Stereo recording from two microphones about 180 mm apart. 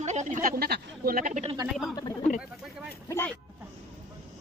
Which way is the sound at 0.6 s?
55° right (ahead or behind).